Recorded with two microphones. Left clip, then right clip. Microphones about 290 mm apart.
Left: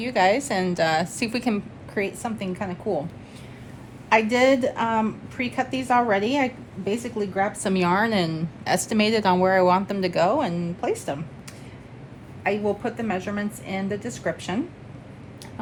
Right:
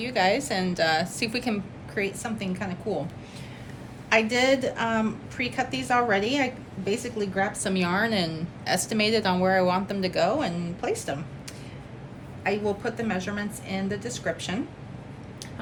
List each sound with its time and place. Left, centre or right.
0.0 s a woman's voice: left
4.1 s a woman's voice: left
12.4 s a woman's voice: left